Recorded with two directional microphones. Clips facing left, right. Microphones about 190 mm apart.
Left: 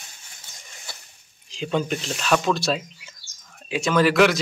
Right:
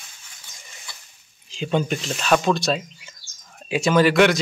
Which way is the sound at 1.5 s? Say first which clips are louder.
Right 2 dB; centre (ahead or behind).